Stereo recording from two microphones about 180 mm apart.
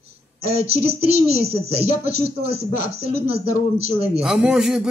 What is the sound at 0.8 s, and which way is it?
Speech, 35° right (ahead or behind).